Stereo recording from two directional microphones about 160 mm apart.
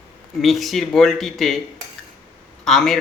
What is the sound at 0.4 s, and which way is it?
Speech, centre (ahead or behind).